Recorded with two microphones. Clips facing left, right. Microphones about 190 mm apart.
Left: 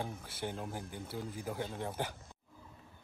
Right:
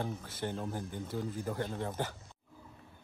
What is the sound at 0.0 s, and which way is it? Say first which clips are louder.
Speech: right 3 dB; 10° left (ahead or behind).